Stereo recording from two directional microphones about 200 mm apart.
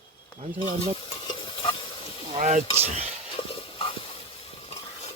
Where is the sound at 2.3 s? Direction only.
35° right (ahead or behind).